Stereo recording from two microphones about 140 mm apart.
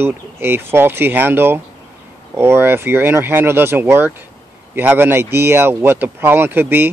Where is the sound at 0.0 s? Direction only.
15° right (ahead or behind).